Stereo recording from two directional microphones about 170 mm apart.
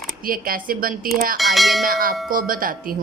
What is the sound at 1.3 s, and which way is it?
Speech, centre (ahead or behind).